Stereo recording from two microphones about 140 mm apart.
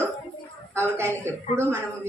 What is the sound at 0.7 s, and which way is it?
Speech, 15° right (ahead or behind).